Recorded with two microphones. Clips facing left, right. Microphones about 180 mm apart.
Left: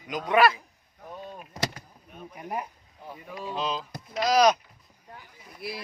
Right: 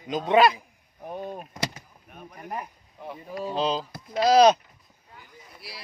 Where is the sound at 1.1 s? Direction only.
55° right (ahead or behind).